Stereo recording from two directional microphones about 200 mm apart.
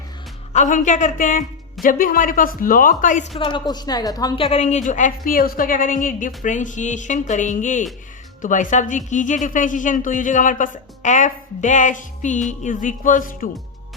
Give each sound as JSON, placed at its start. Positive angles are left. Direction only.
{"t": 0.5, "sound": "a woman's voice", "side_deg": 40}
{"t": 3.4, "sound": "a woman's voice", "side_deg": 20}